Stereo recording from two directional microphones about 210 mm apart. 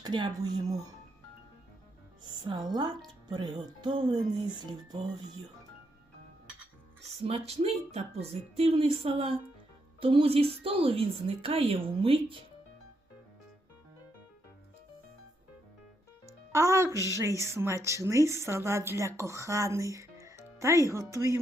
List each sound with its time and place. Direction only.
0.0 s speech: 20° right (ahead or behind)
2.4 s speech: 20° right (ahead or behind)
7.3 s speech: 30° right (ahead or behind)
16.5 s a woman's voice: 15° right (ahead or behind)